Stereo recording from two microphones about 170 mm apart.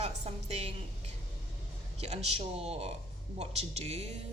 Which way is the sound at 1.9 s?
40° right (ahead or behind).